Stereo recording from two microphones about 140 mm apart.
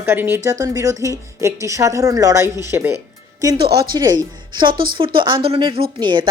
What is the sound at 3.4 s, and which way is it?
Speech, 30° right (ahead or behind).